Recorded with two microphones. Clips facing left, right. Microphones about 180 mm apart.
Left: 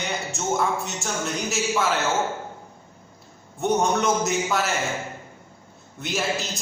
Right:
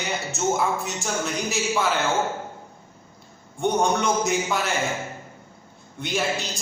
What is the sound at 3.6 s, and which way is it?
A man's voice, centre (ahead or behind).